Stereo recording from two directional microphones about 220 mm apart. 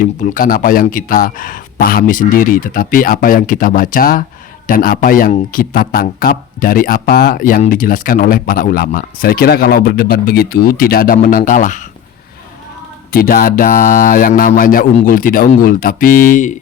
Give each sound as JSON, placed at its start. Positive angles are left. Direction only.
{"t": 0.0, "sound": "speech", "side_deg": 40}
{"t": 13.1, "sound": "speech", "side_deg": 40}